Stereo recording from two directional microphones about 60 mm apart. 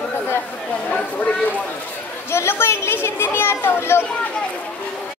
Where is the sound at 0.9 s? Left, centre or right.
Left.